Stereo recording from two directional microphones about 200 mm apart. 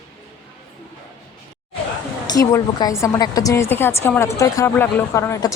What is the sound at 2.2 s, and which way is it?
A woman's voice, 20° left (ahead or behind).